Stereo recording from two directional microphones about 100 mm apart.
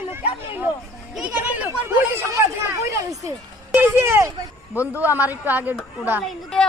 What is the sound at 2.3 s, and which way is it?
Speech, 30° right (ahead or behind).